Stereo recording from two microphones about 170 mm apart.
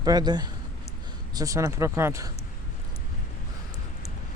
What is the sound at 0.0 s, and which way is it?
A man's voice, 25° right (ahead or behind).